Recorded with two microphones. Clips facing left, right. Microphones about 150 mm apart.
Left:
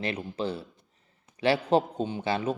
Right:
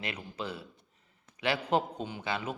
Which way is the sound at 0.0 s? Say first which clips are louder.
Left 7 dB; 30° left (ahead or behind).